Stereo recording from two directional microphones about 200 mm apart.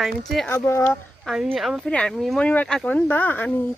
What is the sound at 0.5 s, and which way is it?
Speech, 15° left (ahead or behind).